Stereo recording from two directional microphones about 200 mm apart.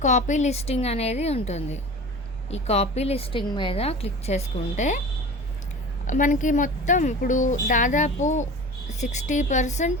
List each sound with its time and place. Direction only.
0.0 s a woman's voice: 40° left (ahead or behind)
6.1 s a woman's voice: 40° left (ahead or behind)